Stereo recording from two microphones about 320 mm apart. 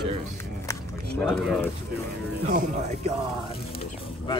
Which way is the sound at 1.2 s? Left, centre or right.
Centre.